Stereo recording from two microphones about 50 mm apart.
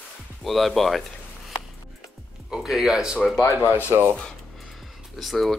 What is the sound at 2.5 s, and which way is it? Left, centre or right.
Speech, centre.